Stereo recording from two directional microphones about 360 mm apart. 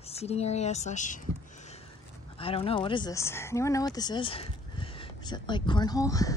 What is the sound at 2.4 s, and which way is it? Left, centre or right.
Speech, centre.